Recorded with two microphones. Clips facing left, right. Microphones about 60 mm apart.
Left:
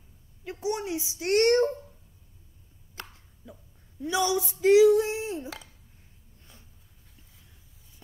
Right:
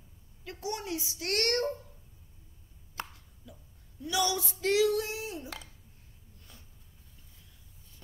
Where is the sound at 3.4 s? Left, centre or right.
Left.